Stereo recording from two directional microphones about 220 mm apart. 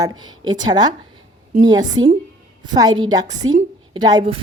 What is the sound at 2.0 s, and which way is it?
Speech, 65° right (ahead or behind).